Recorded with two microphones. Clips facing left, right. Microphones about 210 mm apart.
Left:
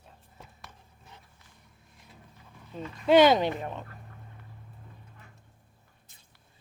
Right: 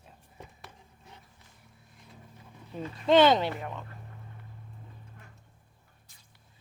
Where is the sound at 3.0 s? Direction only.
10° left (ahead or behind).